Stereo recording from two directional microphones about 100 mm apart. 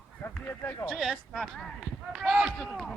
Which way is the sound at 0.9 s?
Centre (ahead or behind).